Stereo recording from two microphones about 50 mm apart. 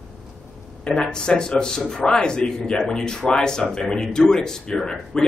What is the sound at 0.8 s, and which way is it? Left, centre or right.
A man's voice, centre.